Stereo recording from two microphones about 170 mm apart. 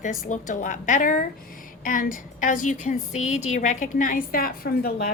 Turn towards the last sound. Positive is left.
turn(degrees=60)  # may be behind; listen again after turning